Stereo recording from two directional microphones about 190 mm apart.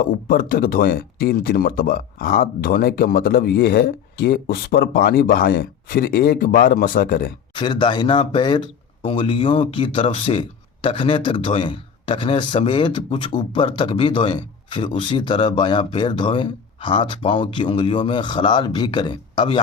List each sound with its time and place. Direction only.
0.0 s speech: 50° left (ahead or behind)
7.5 s speech: 25° left (ahead or behind)